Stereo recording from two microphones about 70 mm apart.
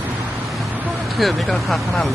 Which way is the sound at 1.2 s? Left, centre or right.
Centre.